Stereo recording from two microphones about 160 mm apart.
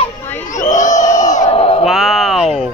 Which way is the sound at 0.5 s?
50° left (ahead or behind).